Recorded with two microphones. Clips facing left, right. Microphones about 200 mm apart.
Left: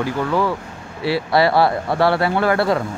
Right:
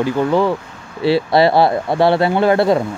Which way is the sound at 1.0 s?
25° right (ahead or behind).